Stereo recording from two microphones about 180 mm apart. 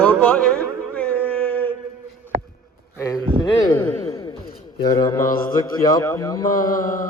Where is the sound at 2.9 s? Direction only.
15° left (ahead or behind).